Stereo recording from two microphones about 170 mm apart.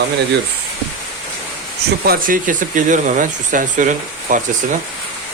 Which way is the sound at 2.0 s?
60° right (ahead or behind).